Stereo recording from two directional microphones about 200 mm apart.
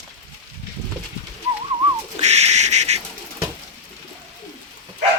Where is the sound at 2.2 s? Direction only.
35° right (ahead or behind).